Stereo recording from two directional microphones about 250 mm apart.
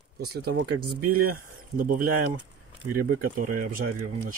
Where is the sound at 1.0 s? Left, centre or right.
Right.